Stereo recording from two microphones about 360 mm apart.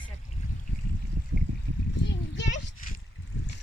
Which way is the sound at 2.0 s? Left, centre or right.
Left.